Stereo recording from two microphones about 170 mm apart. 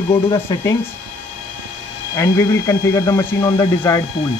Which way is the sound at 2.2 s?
15° left (ahead or behind).